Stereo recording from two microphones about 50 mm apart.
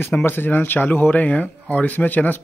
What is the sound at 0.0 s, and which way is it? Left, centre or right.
Speech, left.